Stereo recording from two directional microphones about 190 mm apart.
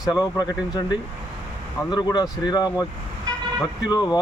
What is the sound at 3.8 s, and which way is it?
Speech, 20° left (ahead or behind).